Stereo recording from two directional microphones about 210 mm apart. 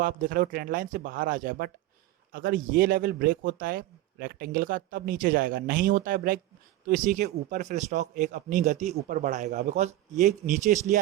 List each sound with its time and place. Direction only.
0.0 s speech: 40° right (ahead or behind)